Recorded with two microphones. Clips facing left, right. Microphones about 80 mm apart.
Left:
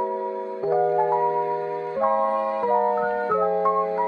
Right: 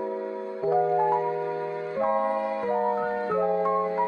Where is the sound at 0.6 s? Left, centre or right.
Left.